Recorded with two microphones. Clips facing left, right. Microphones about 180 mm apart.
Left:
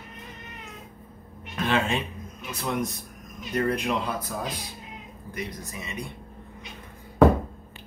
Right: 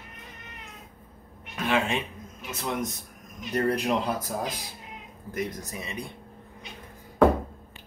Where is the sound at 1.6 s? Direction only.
10° right (ahead or behind).